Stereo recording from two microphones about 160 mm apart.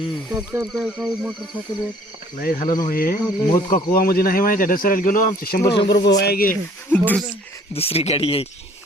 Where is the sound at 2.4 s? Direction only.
65° left (ahead or behind).